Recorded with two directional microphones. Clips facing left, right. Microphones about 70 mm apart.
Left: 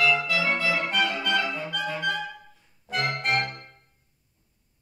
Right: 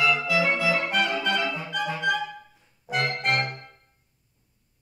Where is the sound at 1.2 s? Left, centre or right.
Centre.